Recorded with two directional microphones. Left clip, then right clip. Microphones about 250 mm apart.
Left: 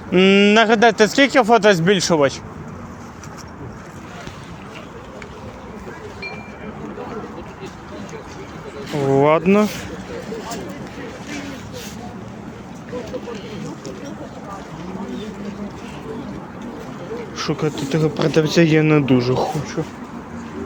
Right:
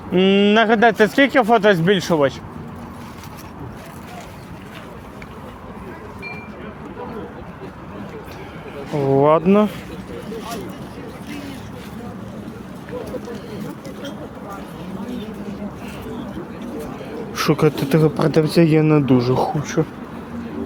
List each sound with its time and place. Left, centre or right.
0.1 s speech: centre
9.0 s speech: centre
17.3 s speech: right
19.8 s speech: right